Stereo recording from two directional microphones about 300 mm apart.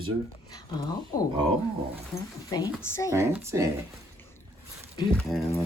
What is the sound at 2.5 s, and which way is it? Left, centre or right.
Speech, centre.